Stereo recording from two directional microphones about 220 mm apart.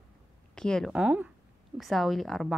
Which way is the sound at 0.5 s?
5° left (ahead or behind).